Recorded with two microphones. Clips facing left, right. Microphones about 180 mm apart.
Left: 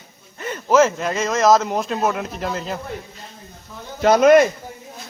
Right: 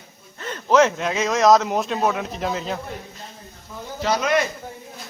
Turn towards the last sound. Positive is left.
turn(degrees=50)  # may be behind; listen again after turning